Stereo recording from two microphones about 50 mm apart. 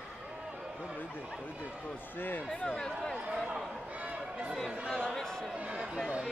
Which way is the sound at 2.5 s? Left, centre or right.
Left.